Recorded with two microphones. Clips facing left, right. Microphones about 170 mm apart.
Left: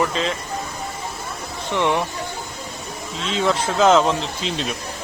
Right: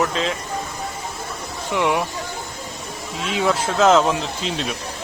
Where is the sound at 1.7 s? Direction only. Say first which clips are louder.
Even; 10° right (ahead or behind).